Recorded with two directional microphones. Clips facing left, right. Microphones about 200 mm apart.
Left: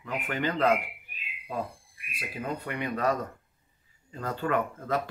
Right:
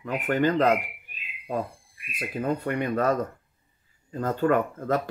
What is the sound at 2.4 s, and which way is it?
Speech, 45° right (ahead or behind).